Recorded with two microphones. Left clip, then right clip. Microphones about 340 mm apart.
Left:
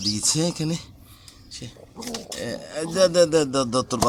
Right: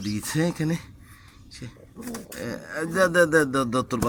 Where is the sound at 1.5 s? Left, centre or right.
Centre.